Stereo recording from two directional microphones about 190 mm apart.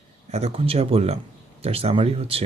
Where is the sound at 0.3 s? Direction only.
35° right (ahead or behind).